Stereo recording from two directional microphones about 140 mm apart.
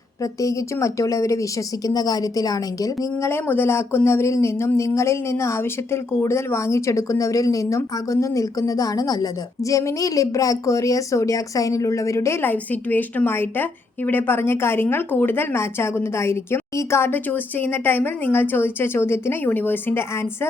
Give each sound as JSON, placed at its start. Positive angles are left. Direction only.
{"t": 0.2, "sound": "speech", "side_deg": 25}